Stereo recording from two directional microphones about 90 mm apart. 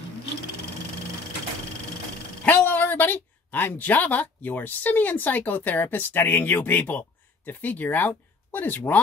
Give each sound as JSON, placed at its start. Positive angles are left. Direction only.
{"t": 2.4, "sound": "a woman's voice", "side_deg": 15}